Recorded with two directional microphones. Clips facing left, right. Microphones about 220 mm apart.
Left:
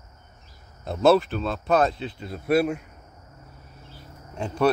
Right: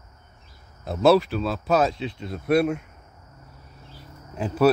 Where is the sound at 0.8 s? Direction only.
Centre (ahead or behind).